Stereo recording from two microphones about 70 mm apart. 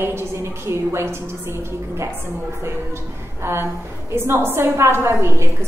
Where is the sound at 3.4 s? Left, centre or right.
Right.